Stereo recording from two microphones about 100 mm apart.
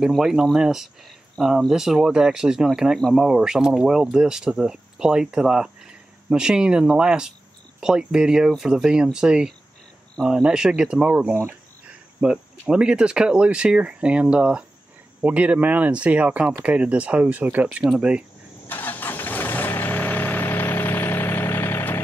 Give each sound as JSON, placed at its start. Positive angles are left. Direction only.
{"t": 0.0, "sound": "speech", "side_deg": -5}
{"t": 18.7, "sound": "vehicle", "side_deg": 20}